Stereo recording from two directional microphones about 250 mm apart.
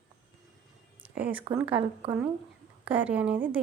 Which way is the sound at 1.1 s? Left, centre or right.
Centre.